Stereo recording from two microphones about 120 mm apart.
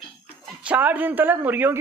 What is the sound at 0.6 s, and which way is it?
Speech, 15° right (ahead or behind).